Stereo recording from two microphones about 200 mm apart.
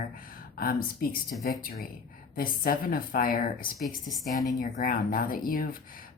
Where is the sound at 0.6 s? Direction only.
45° left (ahead or behind).